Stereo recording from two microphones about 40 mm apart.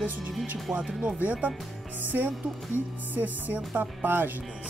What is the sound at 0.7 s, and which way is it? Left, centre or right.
Speech, right.